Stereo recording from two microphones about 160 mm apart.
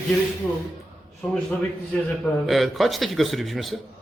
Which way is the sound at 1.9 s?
10° left (ahead or behind).